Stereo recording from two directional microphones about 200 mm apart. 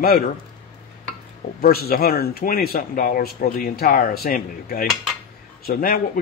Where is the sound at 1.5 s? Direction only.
50° left (ahead or behind).